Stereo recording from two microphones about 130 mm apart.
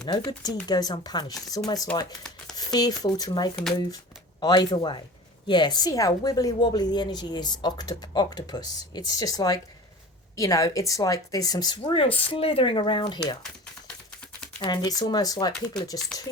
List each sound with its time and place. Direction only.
0.0 s a woman's voice: 35° left (ahead or behind)
14.6 s a woman's voice: 35° left (ahead or behind)
16.1 s speech: 5° left (ahead or behind)